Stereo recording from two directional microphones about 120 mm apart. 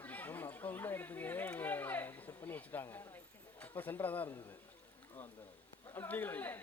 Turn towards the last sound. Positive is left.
turn(degrees=15)  # may be behind; listen again after turning